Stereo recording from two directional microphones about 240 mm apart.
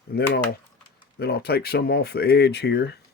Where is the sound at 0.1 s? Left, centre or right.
Left.